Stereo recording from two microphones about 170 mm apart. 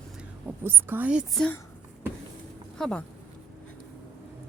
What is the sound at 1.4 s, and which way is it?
Speech, 10° left (ahead or behind).